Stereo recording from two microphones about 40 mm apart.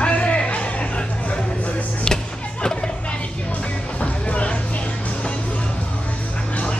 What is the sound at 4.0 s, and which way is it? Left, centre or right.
Music, left.